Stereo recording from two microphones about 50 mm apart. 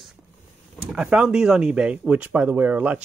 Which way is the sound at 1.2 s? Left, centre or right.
Centre.